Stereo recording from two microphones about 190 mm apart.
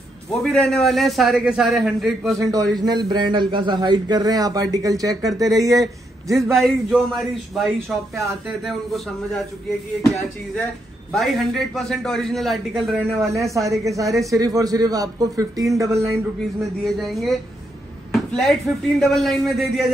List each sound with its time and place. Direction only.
0.3 s a man's voice: 5° left (ahead or behind)
2.3 s a man's voice: 15° right (ahead or behind)
6.3 s a man's voice: centre (ahead or behind)
11.1 s a man's voice: centre (ahead or behind)
13.5 s a man's voice: 15° right (ahead or behind)
16.8 s a man's voice: centre (ahead or behind)